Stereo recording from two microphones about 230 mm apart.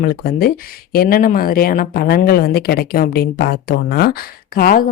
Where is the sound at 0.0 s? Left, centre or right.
Left.